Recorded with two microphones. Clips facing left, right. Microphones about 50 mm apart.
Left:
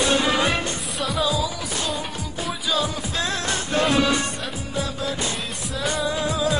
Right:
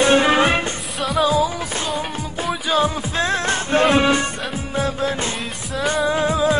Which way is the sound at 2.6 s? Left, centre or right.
Right.